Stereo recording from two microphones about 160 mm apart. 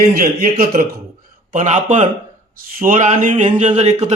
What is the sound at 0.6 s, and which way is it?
Speech, 65° right (ahead or behind).